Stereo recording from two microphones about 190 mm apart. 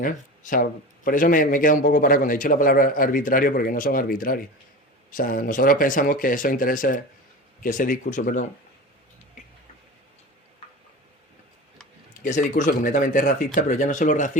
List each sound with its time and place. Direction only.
0.0 s speech: 45° left (ahead or behind)
12.2 s speech: 40° left (ahead or behind)